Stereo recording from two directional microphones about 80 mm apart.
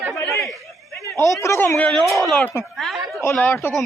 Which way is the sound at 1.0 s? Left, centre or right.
Left.